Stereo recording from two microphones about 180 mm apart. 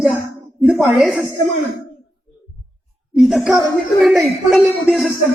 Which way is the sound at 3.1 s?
Centre (ahead or behind).